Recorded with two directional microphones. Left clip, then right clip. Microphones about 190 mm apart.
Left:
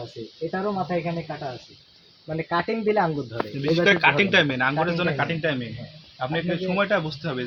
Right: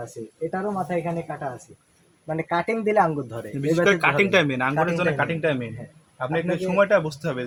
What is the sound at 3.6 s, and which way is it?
Speech, 80° right.